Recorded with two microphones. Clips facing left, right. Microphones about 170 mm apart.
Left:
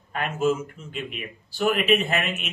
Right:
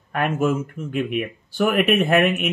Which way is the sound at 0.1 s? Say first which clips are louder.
Right 3 dB; 55° right (ahead or behind).